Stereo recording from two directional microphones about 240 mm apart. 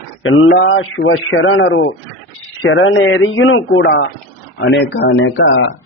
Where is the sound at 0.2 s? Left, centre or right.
Left.